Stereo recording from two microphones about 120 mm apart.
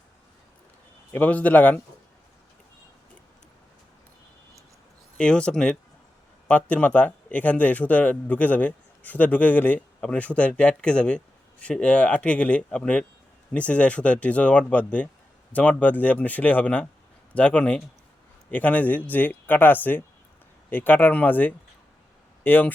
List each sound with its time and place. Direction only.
1.1 s speech: 15° left (ahead or behind)
5.1 s speech: 5° left (ahead or behind)